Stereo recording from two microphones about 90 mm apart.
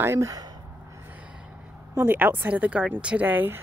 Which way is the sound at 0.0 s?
30° right (ahead or behind).